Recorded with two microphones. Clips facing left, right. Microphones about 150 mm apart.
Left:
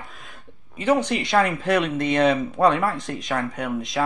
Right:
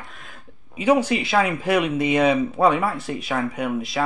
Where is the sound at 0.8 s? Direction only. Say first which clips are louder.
Right 2 dB; 10° right (ahead or behind).